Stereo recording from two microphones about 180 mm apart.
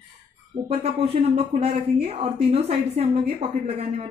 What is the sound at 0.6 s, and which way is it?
Speech, 30° right (ahead or behind).